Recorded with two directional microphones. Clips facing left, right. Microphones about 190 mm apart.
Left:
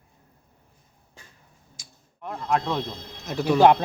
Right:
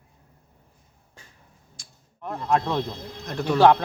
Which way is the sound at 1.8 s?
5° left (ahead or behind).